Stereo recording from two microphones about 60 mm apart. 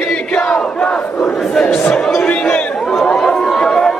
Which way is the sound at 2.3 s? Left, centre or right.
Left.